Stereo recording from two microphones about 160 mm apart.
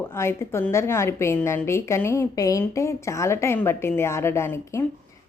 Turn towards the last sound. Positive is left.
turn(degrees=15)  # may be behind; listen again after turning